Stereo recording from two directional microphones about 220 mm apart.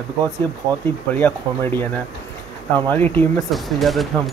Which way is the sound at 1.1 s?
10° left (ahead or behind).